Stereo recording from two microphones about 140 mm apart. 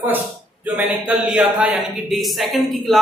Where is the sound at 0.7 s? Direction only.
10° right (ahead or behind).